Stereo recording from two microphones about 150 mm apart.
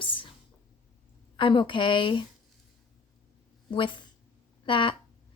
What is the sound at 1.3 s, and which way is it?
Speech, 35° left (ahead or behind).